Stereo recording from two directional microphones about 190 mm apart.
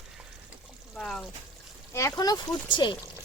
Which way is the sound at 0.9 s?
5° left (ahead or behind).